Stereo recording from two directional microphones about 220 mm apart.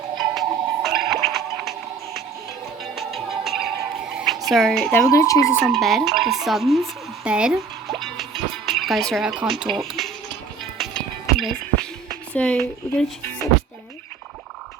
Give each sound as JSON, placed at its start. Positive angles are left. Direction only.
{"t": 0.3, "sound": "music", "side_deg": 0}
{"t": 2.8, "sound": "music", "side_deg": 0}
{"t": 4.4, "sound": "speech", "side_deg": 0}
{"t": 5.6, "sound": "speech", "side_deg": 0}
{"t": 10.8, "sound": "music", "side_deg": 0}
{"t": 12.0, "sound": "speech", "side_deg": 5}